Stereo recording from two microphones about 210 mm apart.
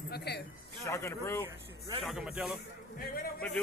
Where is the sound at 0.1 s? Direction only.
50° left (ahead or behind).